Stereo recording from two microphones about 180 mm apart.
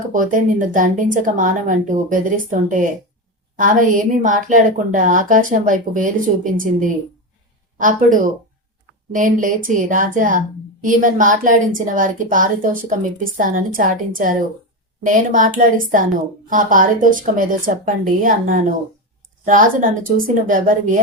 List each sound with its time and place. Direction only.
0.1 s a woman's voice: 45° right (ahead or behind)